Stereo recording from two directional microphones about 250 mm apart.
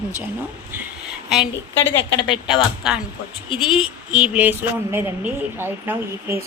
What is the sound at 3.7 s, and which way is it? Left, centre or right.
Speech, centre.